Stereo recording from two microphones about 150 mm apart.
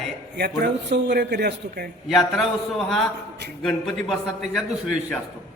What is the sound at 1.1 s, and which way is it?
Speech, 90° right.